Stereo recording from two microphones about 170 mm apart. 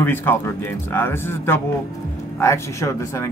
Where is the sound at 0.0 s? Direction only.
15° left (ahead or behind).